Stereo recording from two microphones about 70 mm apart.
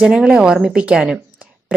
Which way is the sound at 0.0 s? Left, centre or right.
Centre.